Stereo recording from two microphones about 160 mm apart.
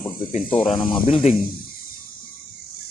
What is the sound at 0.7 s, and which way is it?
Speech, 30° left (ahead or behind).